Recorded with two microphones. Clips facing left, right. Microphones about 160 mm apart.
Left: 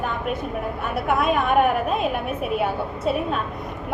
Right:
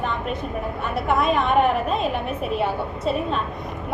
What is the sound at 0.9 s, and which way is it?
A woman's voice, 5° left (ahead or behind).